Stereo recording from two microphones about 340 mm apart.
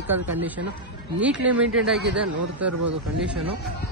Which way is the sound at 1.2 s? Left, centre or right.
Centre.